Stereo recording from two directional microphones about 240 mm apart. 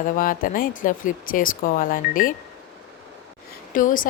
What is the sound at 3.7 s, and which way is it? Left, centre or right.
Speech, left.